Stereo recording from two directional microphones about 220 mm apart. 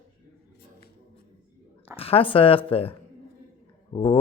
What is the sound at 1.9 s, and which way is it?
Speech, 25° left (ahead or behind).